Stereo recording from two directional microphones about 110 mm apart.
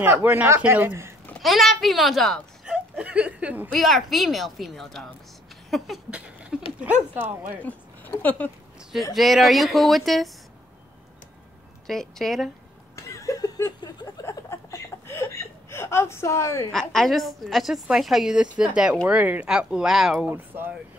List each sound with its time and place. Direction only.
0.0 s speech: 15° right (ahead or behind)
1.4 s a woman's voice: centre (ahead or behind)
2.6 s a sound: 10° right (ahead or behind)
3.7 s a woman's voice: centre (ahead or behind)
6.0 s a sound: 10° right (ahead or behind)
6.8 s speech: 15° right (ahead or behind)
7.6 s speech: 15° left (ahead or behind)
9.1 s a woman's voice: centre (ahead or behind)
11.9 s a woman's voice: 5° left (ahead or behind)
12.9 s chuckle: 25° left (ahead or behind)
16.7 s a woman's voice: 5° left (ahead or behind)
20.2 s speech: 20° right (ahead or behind)